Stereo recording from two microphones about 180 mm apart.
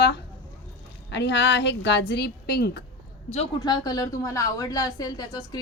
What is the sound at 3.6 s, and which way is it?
A woman's voice, 20° left (ahead or behind).